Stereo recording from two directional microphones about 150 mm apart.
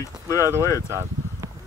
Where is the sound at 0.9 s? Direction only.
15° right (ahead or behind).